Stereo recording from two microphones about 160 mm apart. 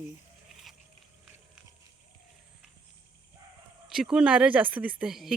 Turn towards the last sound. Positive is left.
turn(degrees=0)  # may be behind; listen again after turning